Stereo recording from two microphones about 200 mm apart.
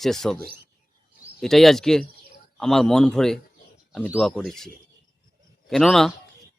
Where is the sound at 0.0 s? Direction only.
Centre (ahead or behind).